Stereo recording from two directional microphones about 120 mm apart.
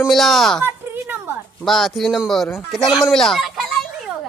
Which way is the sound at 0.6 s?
20° right (ahead or behind).